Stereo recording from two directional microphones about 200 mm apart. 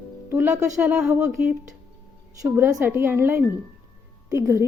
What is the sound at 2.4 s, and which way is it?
Speech, 10° right (ahead or behind).